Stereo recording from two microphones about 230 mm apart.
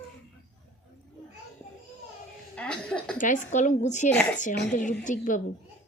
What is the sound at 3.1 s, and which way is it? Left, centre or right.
A woman's voice, left.